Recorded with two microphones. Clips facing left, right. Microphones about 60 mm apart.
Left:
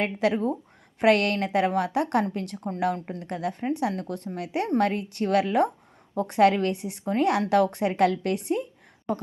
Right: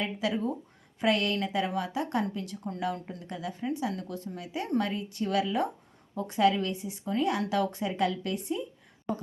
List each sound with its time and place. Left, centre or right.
0.0 s speech: left